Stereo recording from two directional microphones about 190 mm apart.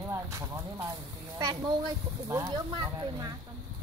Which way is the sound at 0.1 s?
15° right (ahead or behind).